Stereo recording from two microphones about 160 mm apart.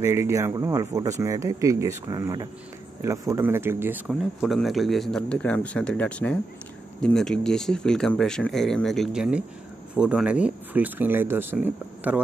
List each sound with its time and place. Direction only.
0.0 s speech: 15° right (ahead or behind)
4.1 s speech: centre (ahead or behind)